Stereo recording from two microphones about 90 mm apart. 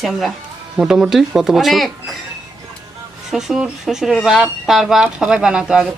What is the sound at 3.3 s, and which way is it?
Speech, 5° right (ahead or behind).